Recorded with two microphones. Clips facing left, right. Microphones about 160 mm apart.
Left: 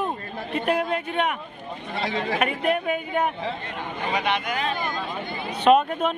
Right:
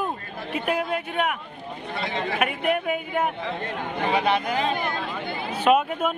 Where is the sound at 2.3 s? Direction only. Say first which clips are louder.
Even; 5° right (ahead or behind).